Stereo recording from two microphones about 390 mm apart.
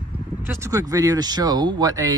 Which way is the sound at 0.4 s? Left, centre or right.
Centre.